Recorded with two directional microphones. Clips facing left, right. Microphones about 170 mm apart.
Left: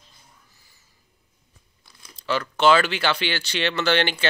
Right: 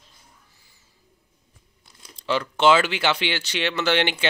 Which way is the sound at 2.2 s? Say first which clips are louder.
Even; 20° right (ahead or behind).